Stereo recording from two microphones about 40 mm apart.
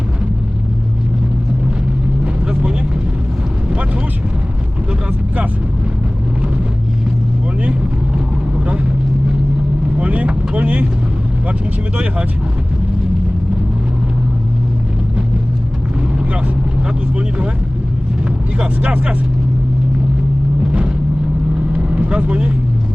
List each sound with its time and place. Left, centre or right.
2.2 s vehicle: right
10.0 s vehicle: right
17.2 s vehicle: right
18.5 s vehicle: right
21.7 s vehicle: right